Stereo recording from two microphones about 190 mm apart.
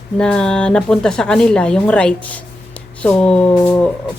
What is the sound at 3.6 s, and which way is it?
Speech, 15° left (ahead or behind).